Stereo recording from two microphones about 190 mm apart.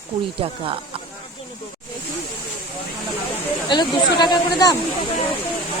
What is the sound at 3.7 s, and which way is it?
Speech, 25° left (ahead or behind).